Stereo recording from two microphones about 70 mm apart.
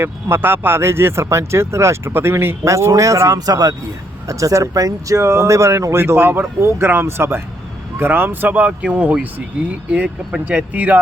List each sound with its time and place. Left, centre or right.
0.0 s speech: right
2.9 s speech: right
3.3 s speech: right
4.3 s speech: right